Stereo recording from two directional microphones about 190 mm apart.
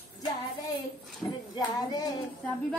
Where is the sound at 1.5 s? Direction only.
20° left (ahead or behind).